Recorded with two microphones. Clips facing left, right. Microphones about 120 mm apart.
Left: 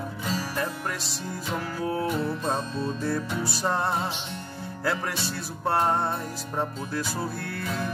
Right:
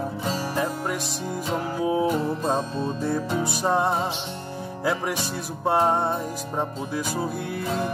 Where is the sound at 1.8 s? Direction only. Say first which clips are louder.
Right 5 dB; 15° right (ahead or behind).